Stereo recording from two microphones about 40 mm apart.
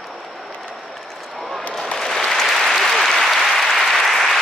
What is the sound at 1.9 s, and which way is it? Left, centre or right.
Applause, centre.